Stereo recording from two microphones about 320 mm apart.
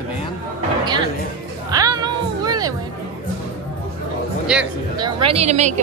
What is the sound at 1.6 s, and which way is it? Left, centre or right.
Music, centre.